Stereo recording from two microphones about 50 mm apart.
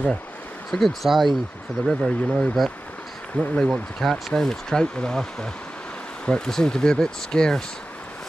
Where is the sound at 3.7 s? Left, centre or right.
Centre.